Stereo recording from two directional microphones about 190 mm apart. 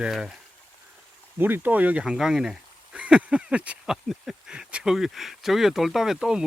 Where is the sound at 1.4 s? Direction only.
10° right (ahead or behind).